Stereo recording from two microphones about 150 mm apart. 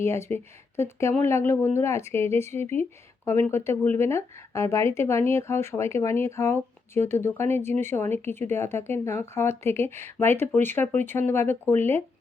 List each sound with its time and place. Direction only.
0.0 s speech: 15° left (ahead or behind)